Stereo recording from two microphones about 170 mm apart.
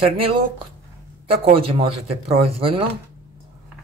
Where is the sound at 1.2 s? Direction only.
35° right (ahead or behind).